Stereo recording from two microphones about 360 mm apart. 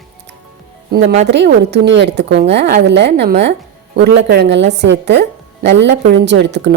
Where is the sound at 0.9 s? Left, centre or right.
Right.